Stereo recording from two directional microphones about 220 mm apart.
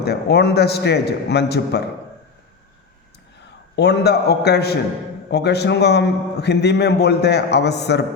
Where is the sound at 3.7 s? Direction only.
50° left (ahead or behind).